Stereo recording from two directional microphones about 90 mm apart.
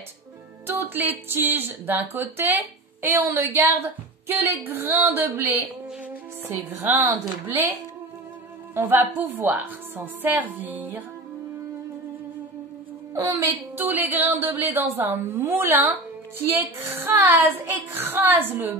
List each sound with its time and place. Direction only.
0.7 s speech: 25° right (ahead or behind)
8.7 s speech: 25° right (ahead or behind)
13.1 s a woman's voice: 35° right (ahead or behind)
13.7 s speech: 20° right (ahead or behind)